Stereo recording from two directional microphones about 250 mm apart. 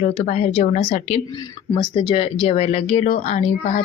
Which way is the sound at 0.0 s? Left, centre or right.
Left.